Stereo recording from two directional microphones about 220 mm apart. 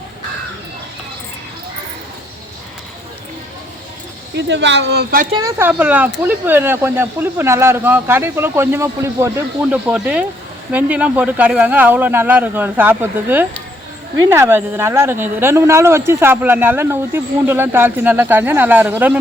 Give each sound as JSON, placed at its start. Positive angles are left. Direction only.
{"t": 4.4, "sound": "speech", "side_deg": -55}
{"t": 5.3, "sound": "speech", "side_deg": -15}